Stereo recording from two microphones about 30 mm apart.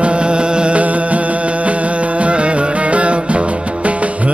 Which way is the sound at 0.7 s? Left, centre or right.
Right.